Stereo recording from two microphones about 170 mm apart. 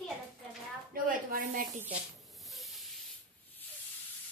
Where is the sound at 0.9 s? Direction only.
55° right (ahead or behind).